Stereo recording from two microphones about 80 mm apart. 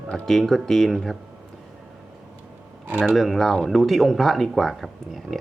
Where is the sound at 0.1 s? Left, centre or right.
Centre.